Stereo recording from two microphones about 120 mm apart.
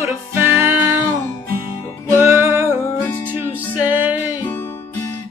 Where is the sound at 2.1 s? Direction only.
20° right (ahead or behind).